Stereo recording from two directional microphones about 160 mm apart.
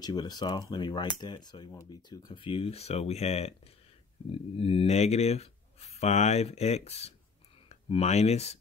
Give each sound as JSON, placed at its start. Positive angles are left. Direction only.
{"t": 0.0, "sound": "speech", "side_deg": 25}